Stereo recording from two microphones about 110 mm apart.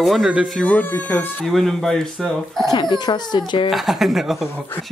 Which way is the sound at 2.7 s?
40° left (ahead or behind).